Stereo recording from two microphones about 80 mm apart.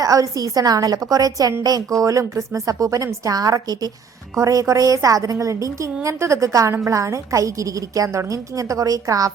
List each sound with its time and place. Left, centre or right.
0.0 s a woman's voice: right
3.3 s a woman's voice: right
4.4 s a woman's voice: right